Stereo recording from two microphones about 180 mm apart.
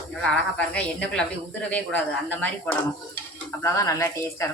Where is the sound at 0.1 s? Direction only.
5° left (ahead or behind).